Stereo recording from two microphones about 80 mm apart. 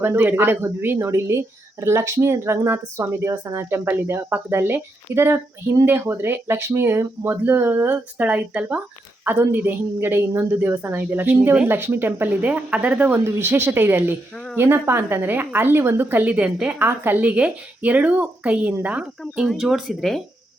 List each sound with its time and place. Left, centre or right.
0.2 s a woman's voice: right
13.1 s a woman's voice: right
19.2 s speech: centre